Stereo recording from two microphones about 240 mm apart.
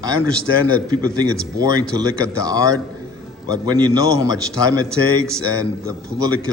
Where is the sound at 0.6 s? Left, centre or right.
Centre.